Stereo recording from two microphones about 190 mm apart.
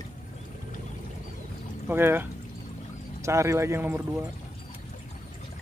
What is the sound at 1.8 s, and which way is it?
Speech, 10° right (ahead or behind).